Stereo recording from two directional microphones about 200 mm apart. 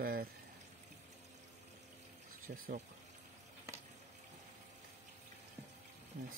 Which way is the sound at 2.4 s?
45° right (ahead or behind).